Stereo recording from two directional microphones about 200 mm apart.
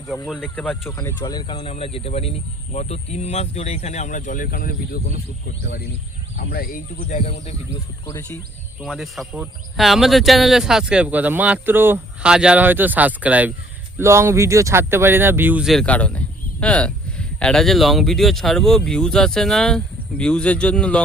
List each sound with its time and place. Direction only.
0.3 s speech: 5° left (ahead or behind); by 7.5 s 35° left (ahead or behind)
8.0 s speech: 15° left (ahead or behind)
8.8 s speech: centre (ahead or behind)